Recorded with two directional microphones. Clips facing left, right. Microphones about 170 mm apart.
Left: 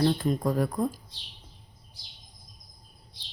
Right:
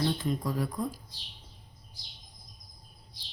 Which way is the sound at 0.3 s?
50° left (ahead or behind).